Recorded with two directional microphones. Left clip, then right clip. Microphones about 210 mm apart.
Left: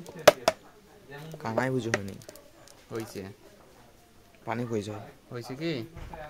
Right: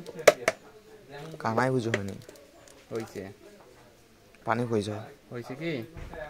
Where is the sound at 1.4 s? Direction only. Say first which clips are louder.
Right 3 dB; 5° right (ahead or behind).